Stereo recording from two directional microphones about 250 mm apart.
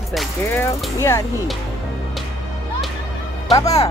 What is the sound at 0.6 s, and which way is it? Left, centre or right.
Speech, centre.